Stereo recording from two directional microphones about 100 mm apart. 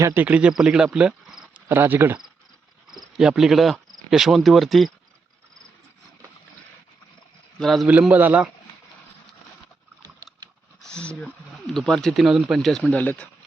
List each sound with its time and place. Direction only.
0.0 s speech: 20° right (ahead or behind)
0.9 s cricket: 5° right (ahead or behind)
1.6 s speech: 20° right (ahead or behind)
2.8 s cricket: 5° right (ahead or behind)
4.1 s speech: 5° right (ahead or behind)
7.6 s speech: centre (ahead or behind)
7.9 s speech: 15° right (ahead or behind)
10.8 s speech: 10° left (ahead or behind)